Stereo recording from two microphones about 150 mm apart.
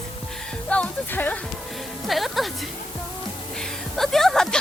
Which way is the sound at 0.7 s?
10° left (ahead or behind).